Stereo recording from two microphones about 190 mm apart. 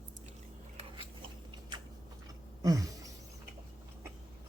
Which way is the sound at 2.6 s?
20° right (ahead or behind).